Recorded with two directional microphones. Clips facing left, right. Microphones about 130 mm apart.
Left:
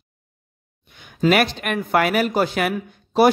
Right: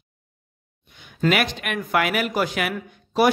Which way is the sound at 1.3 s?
40° left (ahead or behind).